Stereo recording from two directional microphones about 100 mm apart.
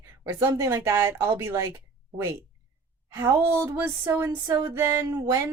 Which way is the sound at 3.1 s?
25° right (ahead or behind).